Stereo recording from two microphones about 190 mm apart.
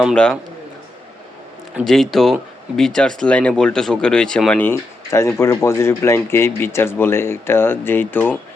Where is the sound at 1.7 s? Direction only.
Centre (ahead or behind).